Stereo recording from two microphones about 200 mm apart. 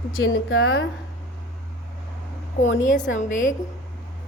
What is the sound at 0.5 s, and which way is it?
Speech, 90° left.